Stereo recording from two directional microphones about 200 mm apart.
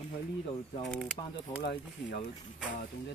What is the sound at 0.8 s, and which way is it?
Speech, centre (ahead or behind).